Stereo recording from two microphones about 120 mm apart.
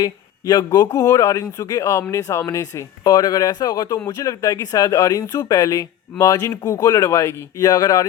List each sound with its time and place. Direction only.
0.0 s speech: 35° left (ahead or behind)